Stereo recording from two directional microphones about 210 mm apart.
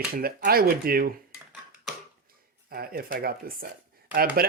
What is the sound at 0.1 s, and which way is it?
Speech, 45° right (ahead or behind).